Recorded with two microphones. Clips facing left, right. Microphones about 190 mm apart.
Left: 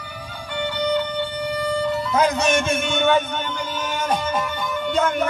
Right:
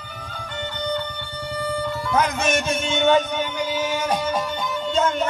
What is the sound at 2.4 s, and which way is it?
Speech, 50° left (ahead or behind).